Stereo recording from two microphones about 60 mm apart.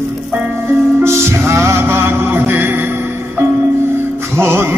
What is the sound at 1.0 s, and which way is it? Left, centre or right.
Music, right.